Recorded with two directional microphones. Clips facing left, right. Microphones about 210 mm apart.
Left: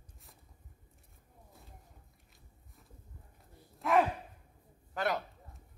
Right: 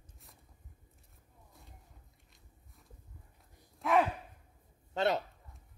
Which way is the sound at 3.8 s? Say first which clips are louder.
Even; centre (ahead or behind).